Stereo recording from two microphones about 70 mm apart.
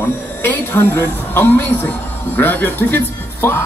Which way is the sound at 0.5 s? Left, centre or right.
Left.